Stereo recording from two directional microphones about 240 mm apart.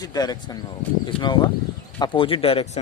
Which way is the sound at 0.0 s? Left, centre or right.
Centre.